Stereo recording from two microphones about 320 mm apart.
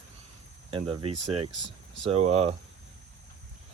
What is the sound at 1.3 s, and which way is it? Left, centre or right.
Speech, right.